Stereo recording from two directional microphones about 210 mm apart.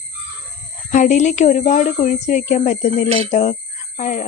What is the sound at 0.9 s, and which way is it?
Speech, 35° left (ahead or behind).